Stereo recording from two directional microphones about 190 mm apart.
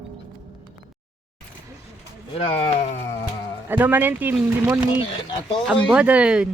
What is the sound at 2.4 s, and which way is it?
Speech, 35° left (ahead or behind).